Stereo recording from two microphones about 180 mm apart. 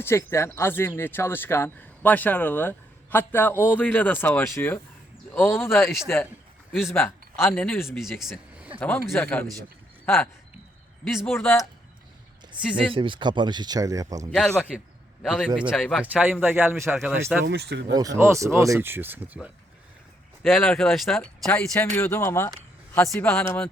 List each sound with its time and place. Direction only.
0.0 s speech: 15° left (ahead or behind)
6.9 s speech: 15° left (ahead or behind)
8.2 s a sound: 5° right (ahead or behind)
8.8 s speech: 10° left (ahead or behind)
11.0 s speech: centre (ahead or behind)
11.3 s speech: 10° left (ahead or behind)
12.5 s speech: 5° right (ahead or behind)
12.9 s speech: 30° right (ahead or behind)
14.3 s speech: 5° left (ahead or behind)
16.2 s speech: 10° right (ahead or behind)
17.4 s speech: 70° right (ahead or behind)
18.2 s speech: 15° right (ahead or behind)
20.4 s speech: 10° left (ahead or behind)